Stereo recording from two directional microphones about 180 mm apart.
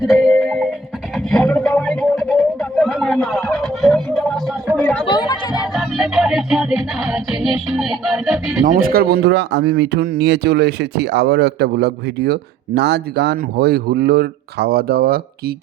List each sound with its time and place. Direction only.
0.0 s music: centre (ahead or behind)
1.1 s a sound: 5° left (ahead or behind)
4.8 s chatter: 5° left (ahead or behind)
5.0 s a sound: 25° left (ahead or behind)
5.7 s music: 5° right (ahead or behind)
8.6 s speech: 50° right (ahead or behind)